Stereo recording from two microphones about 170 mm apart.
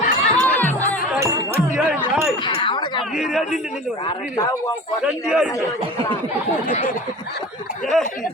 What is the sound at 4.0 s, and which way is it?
Speech, 25° left (ahead or behind).